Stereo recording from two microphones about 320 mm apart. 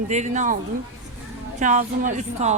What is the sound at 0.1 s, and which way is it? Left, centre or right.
Speech, right.